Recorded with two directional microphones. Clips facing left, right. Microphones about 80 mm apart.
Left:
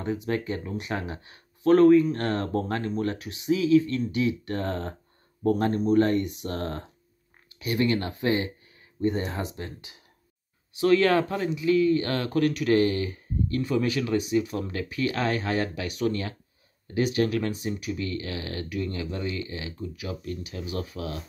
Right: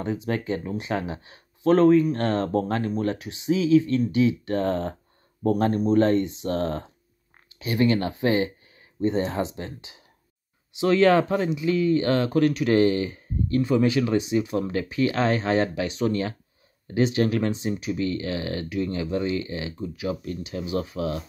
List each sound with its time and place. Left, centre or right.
0.0 s speech: right